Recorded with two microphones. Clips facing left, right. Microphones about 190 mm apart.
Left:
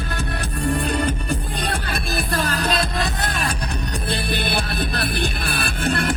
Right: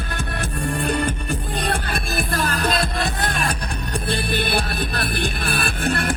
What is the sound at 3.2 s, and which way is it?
Music, 45° right (ahead or behind).